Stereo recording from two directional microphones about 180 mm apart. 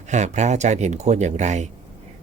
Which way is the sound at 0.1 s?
40° right (ahead or behind).